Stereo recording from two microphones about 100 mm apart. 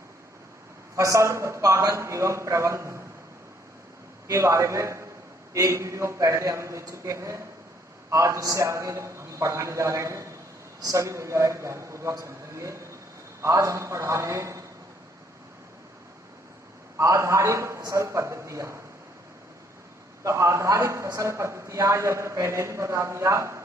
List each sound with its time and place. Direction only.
0.9 s a man's voice: 30° right (ahead or behind)
4.3 s a man's voice: 30° right (ahead or behind)
17.0 s a man's voice: 30° right (ahead or behind)
20.2 s a man's voice: 30° right (ahead or behind)